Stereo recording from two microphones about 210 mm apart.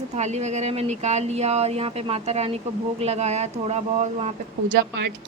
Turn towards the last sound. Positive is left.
turn(degrees=-50)  # may be behind; listen again after turning